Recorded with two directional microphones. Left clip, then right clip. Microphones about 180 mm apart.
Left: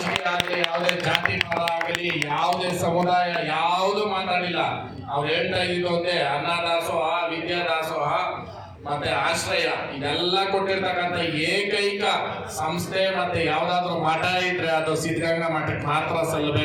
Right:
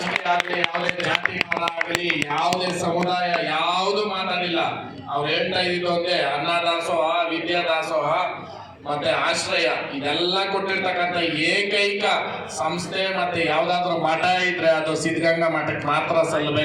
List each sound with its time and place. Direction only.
0.3 s speech: 20° left (ahead or behind)
13.7 s a man's voice: 50° left (ahead or behind)